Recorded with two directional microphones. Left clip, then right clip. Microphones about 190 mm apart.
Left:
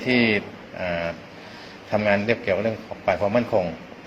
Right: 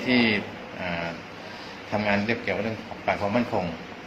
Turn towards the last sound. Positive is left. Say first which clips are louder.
# left 5 dB
turn(degrees=50)  # may be behind; listen again after turning